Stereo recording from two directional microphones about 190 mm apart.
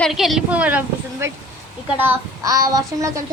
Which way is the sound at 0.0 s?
Centre (ahead or behind).